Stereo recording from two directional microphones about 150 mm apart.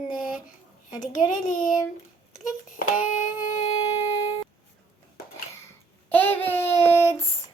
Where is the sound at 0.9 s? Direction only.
60° left (ahead or behind).